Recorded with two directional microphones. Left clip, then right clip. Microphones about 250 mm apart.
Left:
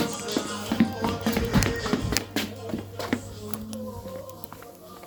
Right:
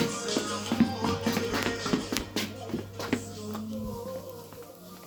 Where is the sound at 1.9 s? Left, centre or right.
Left.